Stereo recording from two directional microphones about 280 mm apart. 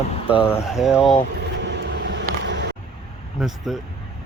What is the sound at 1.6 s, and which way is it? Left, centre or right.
Vehicle, right.